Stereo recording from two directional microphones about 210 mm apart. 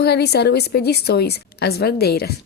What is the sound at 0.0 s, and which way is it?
Speech, 50° left (ahead or behind).